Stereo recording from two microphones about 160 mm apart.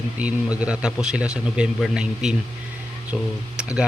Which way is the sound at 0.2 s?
10° right (ahead or behind).